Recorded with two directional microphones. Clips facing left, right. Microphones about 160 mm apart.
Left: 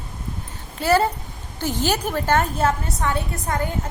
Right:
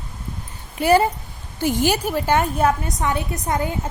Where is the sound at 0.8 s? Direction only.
15° right (ahead or behind).